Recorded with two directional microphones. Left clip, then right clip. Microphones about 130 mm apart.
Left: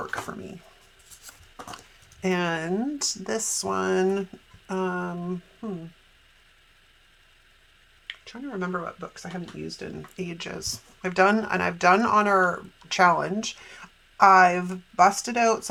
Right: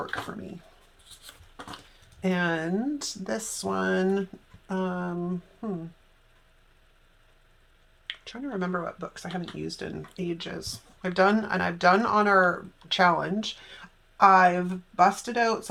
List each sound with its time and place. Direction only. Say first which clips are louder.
2.2 s speech: left 1 dB; 45° left (ahead or behind)
5.6 s a sound: right 1 dB; 5° left (ahead or behind)
8.0 s speech: right 1 dB; 5° left (ahead or behind)
10.2 s speech: even; 40° left (ahead or behind)